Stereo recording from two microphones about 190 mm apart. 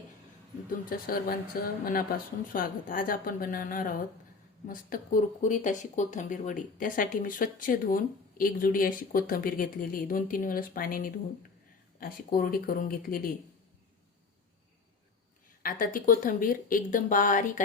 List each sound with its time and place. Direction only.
0.7 s speech: 50° left (ahead or behind)
15.6 s speech: 45° left (ahead or behind)